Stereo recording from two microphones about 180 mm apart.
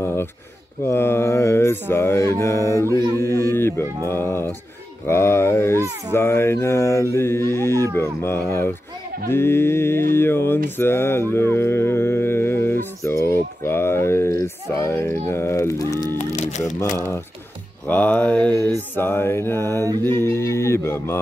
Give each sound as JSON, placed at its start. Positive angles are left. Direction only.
{"t": 0.0, "sound": "a sound", "side_deg": 15}
{"t": 0.8, "sound": "speech", "side_deg": 15}
{"t": 10.8, "sound": "livestock", "side_deg": 15}
{"t": 13.0, "sound": "speech", "side_deg": 15}
{"t": 16.2, "sound": "a sound", "side_deg": 40}
{"t": 17.8, "sound": "speech", "side_deg": 10}
{"t": 19.8, "sound": "mantra", "side_deg": -20}
{"t": 20.2, "sound": "speech", "side_deg": 15}